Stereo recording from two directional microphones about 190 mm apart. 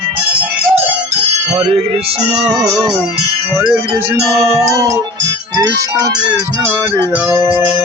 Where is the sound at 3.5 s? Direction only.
10° right (ahead or behind).